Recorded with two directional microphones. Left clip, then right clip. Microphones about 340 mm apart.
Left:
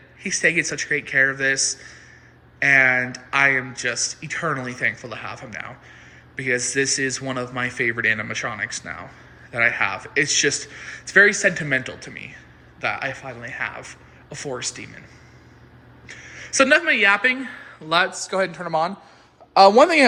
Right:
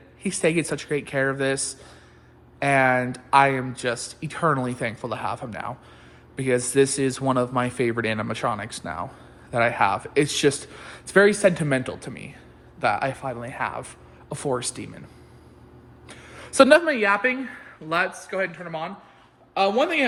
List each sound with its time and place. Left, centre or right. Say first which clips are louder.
0.2 s speech: left 3 dB; centre
16.0 s speech: left 5 dB; centre
18.4 s speech: left 8 dB; centre
19.5 s a man's voice: left 9 dB; left